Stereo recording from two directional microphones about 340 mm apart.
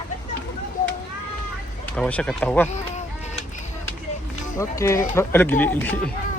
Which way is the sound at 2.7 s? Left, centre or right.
Centre.